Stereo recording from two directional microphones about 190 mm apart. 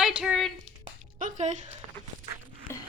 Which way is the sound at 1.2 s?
40° right (ahead or behind).